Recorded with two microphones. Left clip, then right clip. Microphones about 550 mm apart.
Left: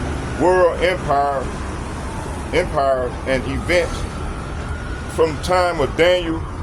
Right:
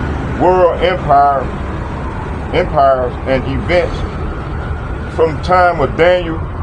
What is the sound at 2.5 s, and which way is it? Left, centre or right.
Speech, left.